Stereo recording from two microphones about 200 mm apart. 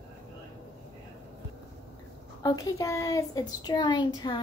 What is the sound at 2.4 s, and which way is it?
Speech, 20° left (ahead or behind).